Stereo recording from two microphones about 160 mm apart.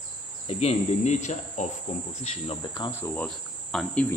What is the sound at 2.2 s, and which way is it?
Cricket, 40° left (ahead or behind).